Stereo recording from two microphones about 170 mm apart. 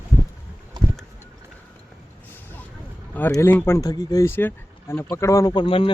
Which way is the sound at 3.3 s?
15° left (ahead or behind).